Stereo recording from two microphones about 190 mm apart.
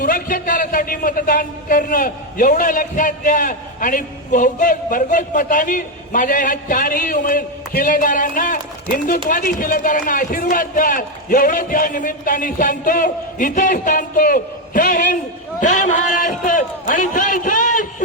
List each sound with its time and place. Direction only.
0.0 s a man's voice: 45° left (ahead or behind)
16.2 s a man's voice: 45° left (ahead or behind)